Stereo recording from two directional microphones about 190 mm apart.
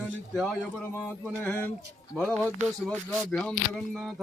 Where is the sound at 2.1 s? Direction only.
5° left (ahead or behind).